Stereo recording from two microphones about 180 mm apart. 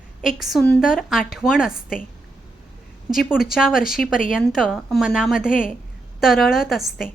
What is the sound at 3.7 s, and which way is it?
Speech, 50° left (ahead or behind).